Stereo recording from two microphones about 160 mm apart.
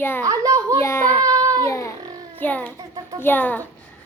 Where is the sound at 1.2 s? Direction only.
20° right (ahead or behind).